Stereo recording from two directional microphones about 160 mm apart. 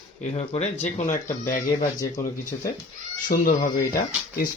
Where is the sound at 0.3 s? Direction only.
45° left (ahead or behind).